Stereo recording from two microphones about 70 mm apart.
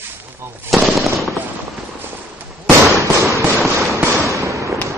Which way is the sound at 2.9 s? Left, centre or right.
Right.